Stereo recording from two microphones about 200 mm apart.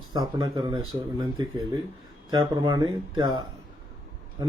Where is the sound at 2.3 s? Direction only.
20° right (ahead or behind).